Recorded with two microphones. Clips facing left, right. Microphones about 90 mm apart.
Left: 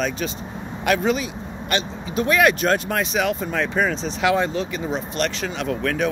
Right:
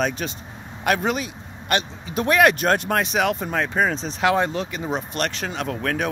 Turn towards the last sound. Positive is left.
turn(degrees=-40)  # may be behind; listen again after turning